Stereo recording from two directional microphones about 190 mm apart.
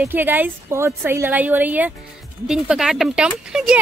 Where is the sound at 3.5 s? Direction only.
5° right (ahead or behind).